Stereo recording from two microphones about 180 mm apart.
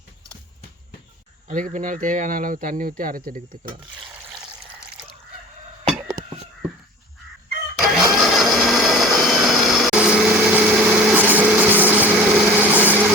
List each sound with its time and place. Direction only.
1.5 s speech: 45° right (ahead or behind)
7.8 s blender: centre (ahead or behind)
11.8 s light engine: 10° right (ahead or behind)